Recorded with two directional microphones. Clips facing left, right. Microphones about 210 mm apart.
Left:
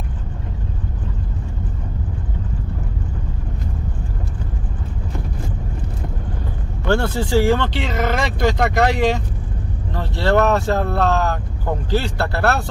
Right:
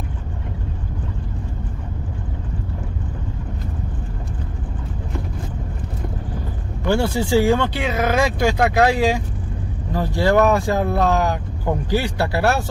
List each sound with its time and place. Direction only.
6.9 s speech: 10° right (ahead or behind)